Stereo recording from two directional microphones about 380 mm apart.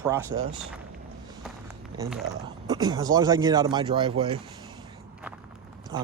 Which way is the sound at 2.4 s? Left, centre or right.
Centre.